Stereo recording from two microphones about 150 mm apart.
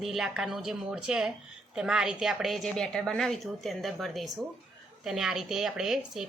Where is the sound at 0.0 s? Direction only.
5° right (ahead or behind).